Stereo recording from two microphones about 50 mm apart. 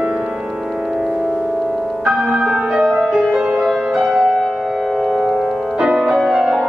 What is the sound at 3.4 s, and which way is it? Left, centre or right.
Music, right.